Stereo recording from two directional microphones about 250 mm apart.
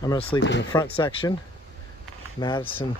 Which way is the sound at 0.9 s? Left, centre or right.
Centre.